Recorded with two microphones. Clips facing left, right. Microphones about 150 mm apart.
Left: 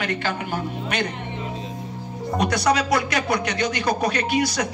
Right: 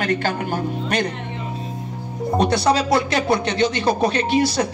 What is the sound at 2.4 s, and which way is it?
Speech, 30° right (ahead or behind).